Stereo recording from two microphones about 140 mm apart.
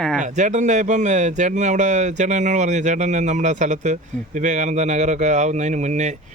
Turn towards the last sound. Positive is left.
turn(degrees=-55)  # may be behind; listen again after turning